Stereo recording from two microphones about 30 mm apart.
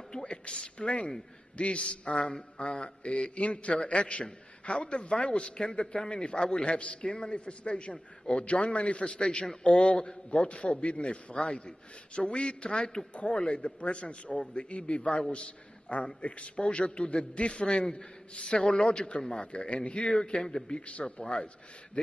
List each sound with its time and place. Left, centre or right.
0.1 s a man's voice: left
6.6 s a man's voice: left
9.7 s a man's voice: left
13.7 s a man's voice: left
19.4 s a man's voice: left
20.4 s a man's voice: left
20.7 s a man's voice: left